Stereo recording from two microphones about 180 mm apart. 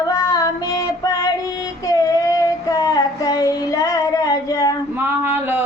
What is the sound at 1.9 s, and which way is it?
Child singing, 20° left (ahead or behind).